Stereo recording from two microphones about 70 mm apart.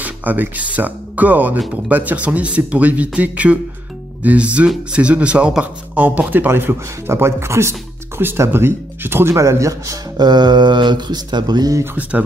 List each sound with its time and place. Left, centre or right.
0.0 s a man's voice: right
8.2 s speech: right
9.4 s a man's voice: right
10.1 s speech: right
11.8 s a man's voice: right